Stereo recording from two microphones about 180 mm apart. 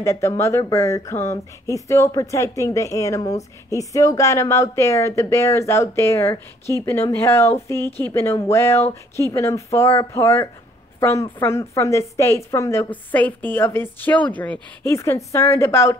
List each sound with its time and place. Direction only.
0.0 s speech: 15° left (ahead or behind)